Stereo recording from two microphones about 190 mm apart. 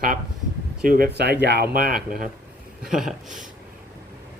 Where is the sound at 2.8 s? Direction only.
Centre (ahead or behind).